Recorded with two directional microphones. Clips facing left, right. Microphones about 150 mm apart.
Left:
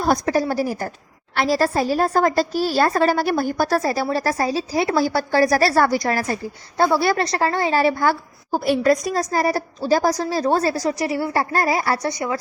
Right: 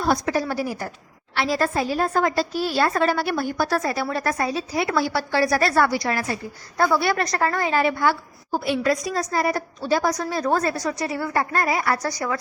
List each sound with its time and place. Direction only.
0.0 s a woman's voice: 40° left (ahead or behind)
6.7 s a woman's voice: 30° left (ahead or behind)